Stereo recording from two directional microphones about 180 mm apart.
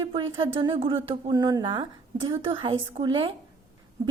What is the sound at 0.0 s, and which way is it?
A woman's voice, 30° right (ahead or behind).